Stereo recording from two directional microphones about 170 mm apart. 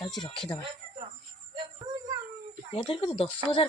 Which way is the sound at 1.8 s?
30° right (ahead or behind).